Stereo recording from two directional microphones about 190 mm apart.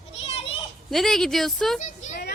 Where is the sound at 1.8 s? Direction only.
40° left (ahead or behind).